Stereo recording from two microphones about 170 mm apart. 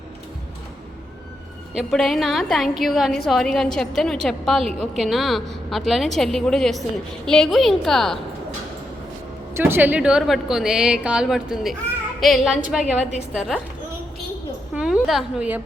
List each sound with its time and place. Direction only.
1.7 s a woman's voice: centre (ahead or behind)
9.6 s a woman's voice: 15° right (ahead or behind)
14.8 s a woman's voice: 5° right (ahead or behind)